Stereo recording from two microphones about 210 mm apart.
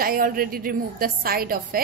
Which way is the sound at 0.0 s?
45° right (ahead or behind).